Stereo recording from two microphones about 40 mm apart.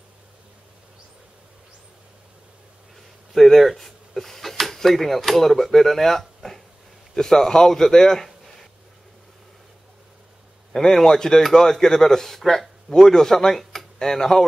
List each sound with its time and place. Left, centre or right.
3.3 s a man's voice: centre
10.7 s a man's voice: centre